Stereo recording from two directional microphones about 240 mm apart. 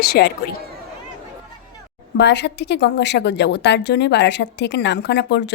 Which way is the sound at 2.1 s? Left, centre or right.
Left.